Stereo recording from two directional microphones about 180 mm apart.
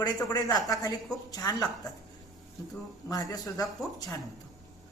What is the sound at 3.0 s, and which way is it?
Speech, 20° left (ahead or behind).